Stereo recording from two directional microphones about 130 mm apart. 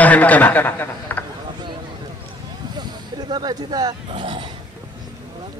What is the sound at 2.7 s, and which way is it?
Speech, 35° right (ahead or behind).